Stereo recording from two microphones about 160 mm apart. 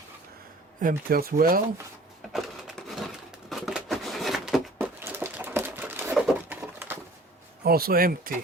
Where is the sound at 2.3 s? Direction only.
Centre (ahead or behind).